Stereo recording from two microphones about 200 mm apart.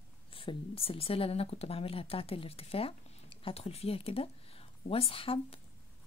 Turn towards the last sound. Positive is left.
turn(degrees=25)  # may be behind; listen again after turning